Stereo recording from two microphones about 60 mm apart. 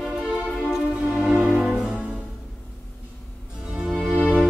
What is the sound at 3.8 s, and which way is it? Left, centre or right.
Music, centre.